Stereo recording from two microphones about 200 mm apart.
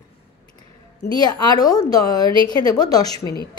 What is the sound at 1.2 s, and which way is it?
Speech, 20° left (ahead or behind).